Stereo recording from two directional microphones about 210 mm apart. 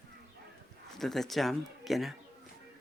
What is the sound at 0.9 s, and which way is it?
Speech, centre (ahead or behind).